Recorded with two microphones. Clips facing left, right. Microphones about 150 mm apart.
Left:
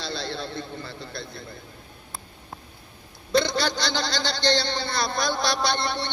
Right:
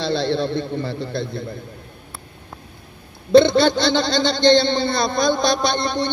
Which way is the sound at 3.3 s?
55° right (ahead or behind).